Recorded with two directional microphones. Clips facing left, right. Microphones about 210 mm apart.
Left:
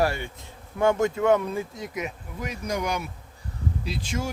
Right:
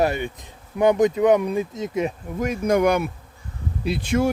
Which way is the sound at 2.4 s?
50° right (ahead or behind).